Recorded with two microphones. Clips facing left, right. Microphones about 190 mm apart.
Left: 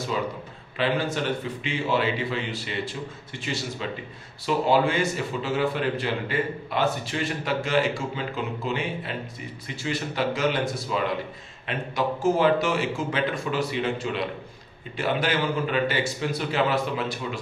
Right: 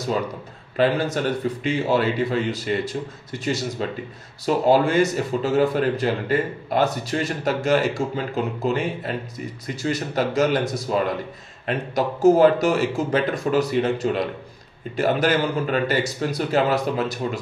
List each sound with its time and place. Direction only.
0.7 s a man's voice: 40° right (ahead or behind)